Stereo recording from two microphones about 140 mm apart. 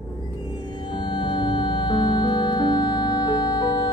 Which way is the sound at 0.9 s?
35° left (ahead or behind).